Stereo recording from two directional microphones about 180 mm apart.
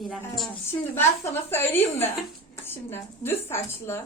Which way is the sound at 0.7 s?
15° left (ahead or behind).